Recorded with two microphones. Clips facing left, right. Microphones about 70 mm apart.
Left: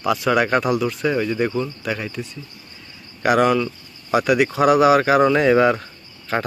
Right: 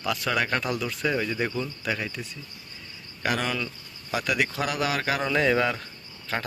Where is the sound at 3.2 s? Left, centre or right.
Centre.